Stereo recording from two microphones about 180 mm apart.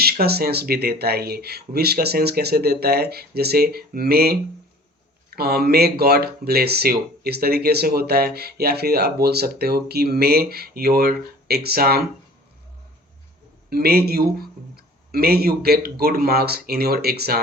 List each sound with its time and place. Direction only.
0.0 s speech: 60° right (ahead or behind)
5.4 s speech: 60° right (ahead or behind)
13.7 s speech: 60° right (ahead or behind)